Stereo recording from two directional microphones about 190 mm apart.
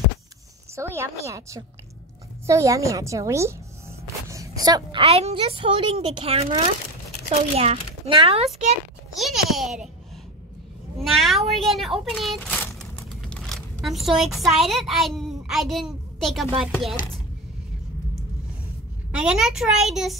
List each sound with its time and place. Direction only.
0.7 s a woman's voice: 15° right (ahead or behind); by 8.5 s 30° right (ahead or behind)
9.1 s a sound: centre (ahead or behind)
11.0 s speech: centre (ahead or behind)
19.1 s a woman's voice: 5° right (ahead or behind)